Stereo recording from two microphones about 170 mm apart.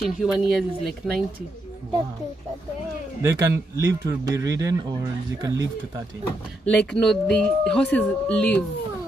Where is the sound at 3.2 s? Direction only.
20° right (ahead or behind).